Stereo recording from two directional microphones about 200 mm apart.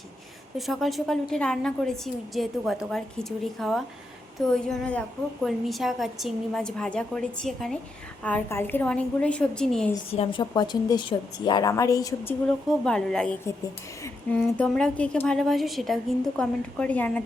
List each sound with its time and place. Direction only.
0.5 s a woman's voice: centre (ahead or behind)
10.1 s a woman's voice: 25° left (ahead or behind)
12.8 s a woman's voice: 5° left (ahead or behind)